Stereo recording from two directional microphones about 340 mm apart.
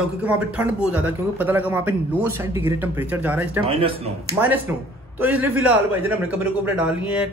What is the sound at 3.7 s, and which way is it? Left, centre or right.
Speech, centre.